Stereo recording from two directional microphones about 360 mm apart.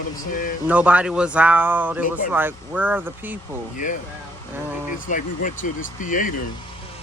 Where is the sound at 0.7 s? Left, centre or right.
Centre.